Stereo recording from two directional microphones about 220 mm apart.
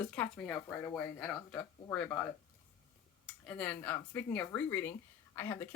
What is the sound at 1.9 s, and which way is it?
Speech, 10° left (ahead or behind).